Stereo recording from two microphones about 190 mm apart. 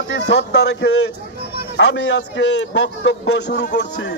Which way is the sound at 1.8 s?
70° left (ahead or behind).